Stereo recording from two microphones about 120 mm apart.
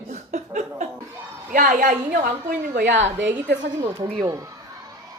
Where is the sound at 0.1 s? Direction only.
90° right.